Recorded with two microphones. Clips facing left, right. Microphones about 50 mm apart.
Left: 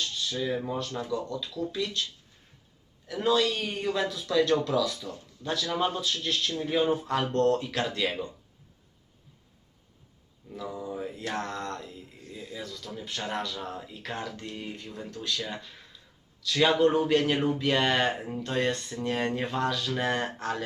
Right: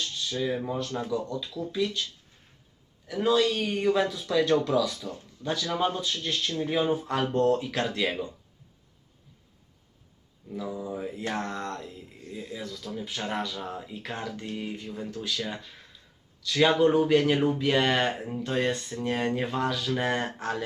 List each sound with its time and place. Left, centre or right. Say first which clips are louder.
0.0 s speech: right 1 dB; centre
10.5 s speech: right 2 dB; centre
12.1 s speech: right 5 dB; right
12.5 s speech: right 2 dB; centre